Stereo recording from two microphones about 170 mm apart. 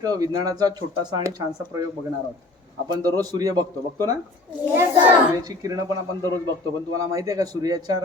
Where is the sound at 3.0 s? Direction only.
20° right (ahead or behind).